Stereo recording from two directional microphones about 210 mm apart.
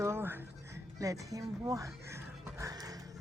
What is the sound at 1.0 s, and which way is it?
Dog, 15° right (ahead or behind).